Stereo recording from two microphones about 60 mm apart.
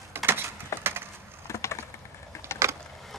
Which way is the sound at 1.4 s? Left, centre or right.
Left.